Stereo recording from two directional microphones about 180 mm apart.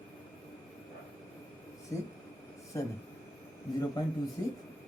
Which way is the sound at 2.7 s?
15° left (ahead or behind).